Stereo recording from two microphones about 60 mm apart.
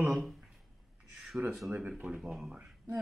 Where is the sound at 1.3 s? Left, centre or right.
Centre.